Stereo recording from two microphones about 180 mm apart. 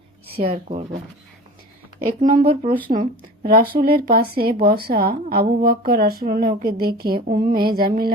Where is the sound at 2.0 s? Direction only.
50° right (ahead or behind).